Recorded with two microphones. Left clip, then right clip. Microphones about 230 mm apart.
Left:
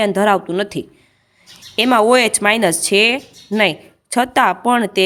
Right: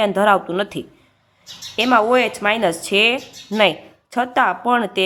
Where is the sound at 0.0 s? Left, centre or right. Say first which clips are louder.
Left 1 dB; left.